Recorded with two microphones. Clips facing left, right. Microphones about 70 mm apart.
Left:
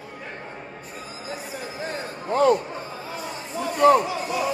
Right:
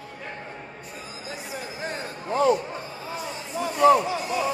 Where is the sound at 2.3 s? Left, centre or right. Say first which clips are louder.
Left 2 dB; left.